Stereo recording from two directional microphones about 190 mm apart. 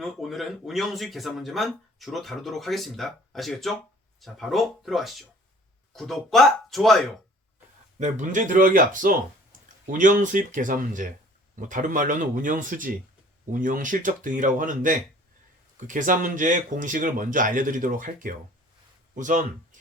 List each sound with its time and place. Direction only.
0.0 s speech: centre (ahead or behind)
7.9 s speech: 40° right (ahead or behind)